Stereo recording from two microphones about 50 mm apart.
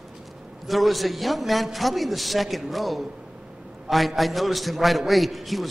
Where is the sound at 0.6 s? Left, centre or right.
Centre.